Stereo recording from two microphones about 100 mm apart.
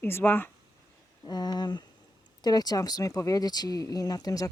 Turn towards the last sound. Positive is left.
turn(degrees=40)  # may be behind; listen again after turning